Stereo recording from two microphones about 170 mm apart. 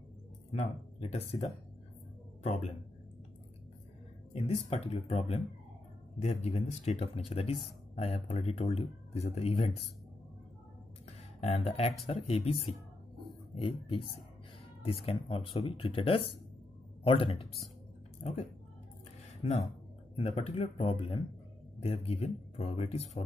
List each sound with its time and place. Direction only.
0.5 s speech: 40° left (ahead or behind)
4.3 s speech: 35° left (ahead or behind)
11.1 s speech: 40° left (ahead or behind)
20.2 s speech: 35° left (ahead or behind)